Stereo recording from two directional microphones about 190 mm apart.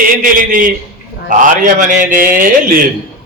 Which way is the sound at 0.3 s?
45° right (ahead or behind).